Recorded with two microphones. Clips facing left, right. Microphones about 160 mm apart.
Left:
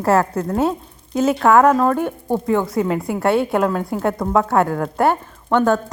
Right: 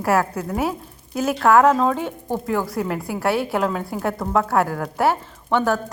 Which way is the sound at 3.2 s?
20° left (ahead or behind).